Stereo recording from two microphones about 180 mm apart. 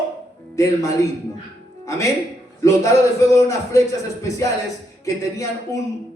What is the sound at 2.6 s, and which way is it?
A man's voice, 15° left (ahead or behind).